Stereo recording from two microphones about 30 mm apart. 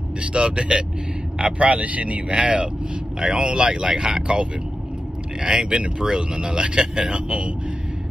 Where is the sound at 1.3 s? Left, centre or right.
Right.